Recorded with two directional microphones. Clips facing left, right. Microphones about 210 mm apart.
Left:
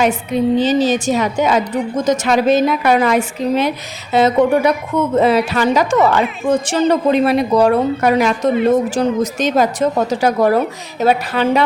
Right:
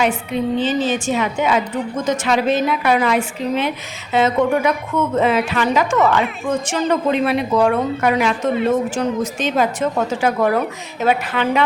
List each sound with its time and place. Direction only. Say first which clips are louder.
0.0 s a woman's voice: left 4 dB; 40° left (ahead or behind)